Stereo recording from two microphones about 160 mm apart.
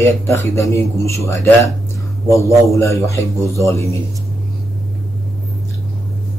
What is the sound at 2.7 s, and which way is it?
A man's voice, 20° left (ahead or behind).